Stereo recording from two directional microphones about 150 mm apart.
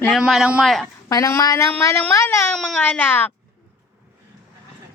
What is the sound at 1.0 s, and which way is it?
Speech, 20° left (ahead or behind).